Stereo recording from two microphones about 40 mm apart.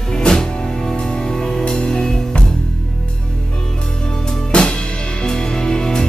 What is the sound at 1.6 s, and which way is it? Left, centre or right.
Music, left.